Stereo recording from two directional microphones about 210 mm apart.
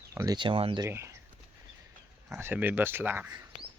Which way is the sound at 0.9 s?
15° right (ahead or behind).